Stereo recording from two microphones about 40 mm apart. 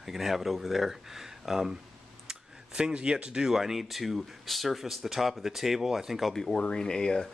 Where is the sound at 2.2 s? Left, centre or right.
Centre.